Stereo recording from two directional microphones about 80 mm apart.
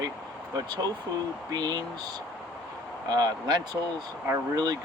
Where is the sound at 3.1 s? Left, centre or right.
Right.